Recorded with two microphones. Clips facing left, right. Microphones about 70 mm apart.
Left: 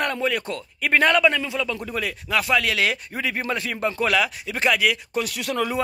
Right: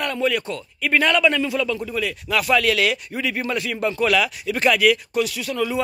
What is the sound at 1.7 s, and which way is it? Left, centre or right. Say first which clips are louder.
Speech: right 3 dB; left.